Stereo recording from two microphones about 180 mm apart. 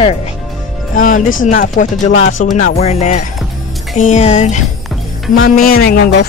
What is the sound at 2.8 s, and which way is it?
Speech, 40° left (ahead or behind).